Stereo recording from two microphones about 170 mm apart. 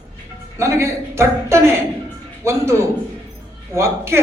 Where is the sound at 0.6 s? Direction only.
15° right (ahead or behind).